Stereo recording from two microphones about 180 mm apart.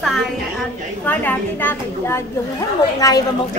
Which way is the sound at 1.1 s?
10° left (ahead or behind).